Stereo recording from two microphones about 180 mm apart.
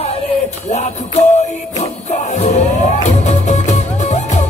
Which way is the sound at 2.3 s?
40° left (ahead or behind).